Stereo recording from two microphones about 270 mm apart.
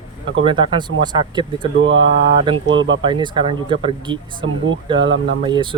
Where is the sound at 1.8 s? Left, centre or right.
Right.